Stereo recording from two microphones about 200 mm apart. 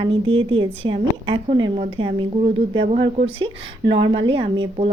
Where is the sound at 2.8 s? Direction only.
40° right (ahead or behind).